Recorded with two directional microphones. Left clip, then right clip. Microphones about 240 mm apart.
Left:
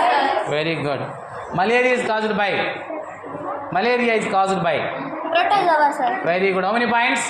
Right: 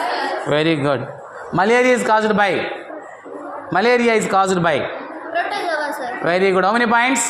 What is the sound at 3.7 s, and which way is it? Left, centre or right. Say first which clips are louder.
A man's voice: right 4 dB; right.